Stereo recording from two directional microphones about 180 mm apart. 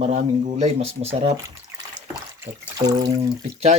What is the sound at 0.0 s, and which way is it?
Speech, 40° right (ahead or behind).